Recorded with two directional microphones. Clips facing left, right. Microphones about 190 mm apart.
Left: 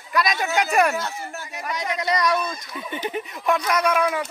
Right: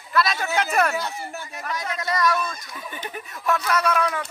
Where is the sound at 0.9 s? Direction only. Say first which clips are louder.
Even; centre (ahead or behind).